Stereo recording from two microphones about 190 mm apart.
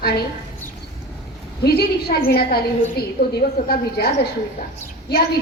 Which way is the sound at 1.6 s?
55° left (ahead or behind).